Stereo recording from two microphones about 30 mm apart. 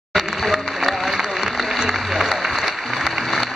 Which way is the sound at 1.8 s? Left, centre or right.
Centre.